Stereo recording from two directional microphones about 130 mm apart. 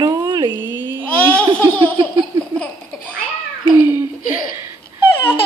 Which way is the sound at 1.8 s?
35° right (ahead or behind).